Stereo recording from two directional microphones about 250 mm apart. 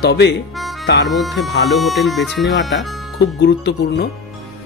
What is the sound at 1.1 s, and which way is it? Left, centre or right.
Speech, centre.